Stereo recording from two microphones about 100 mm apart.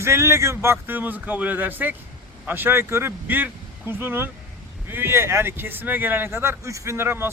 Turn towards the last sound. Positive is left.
turn(degrees=-25)  # may be behind; listen again after turning